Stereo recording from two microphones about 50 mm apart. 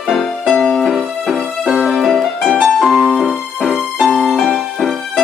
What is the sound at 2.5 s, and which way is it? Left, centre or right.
Music, centre.